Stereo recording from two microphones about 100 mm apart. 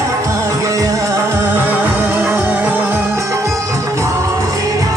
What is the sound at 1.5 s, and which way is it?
Music, 15° right (ahead or behind).